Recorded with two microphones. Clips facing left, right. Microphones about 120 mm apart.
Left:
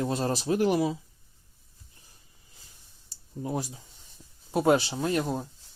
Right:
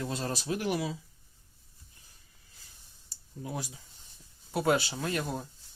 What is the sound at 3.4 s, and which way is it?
Speech, 35° left (ahead or behind).